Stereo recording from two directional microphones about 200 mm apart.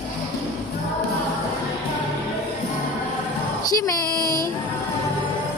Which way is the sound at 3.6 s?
15° left (ahead or behind).